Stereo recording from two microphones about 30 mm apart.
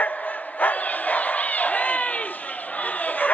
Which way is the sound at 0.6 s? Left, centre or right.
Left.